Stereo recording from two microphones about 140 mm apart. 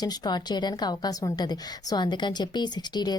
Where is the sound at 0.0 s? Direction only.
30° left (ahead or behind).